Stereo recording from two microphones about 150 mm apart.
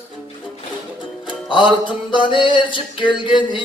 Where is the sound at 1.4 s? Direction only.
35° left (ahead or behind).